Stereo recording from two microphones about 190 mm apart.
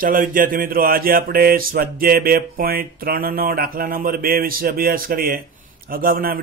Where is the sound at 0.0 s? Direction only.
45° right (ahead or behind).